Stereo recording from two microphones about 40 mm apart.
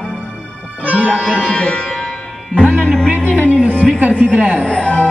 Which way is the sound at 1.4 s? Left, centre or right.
Left.